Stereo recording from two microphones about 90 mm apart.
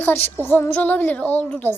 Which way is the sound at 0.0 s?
25° left (ahead or behind).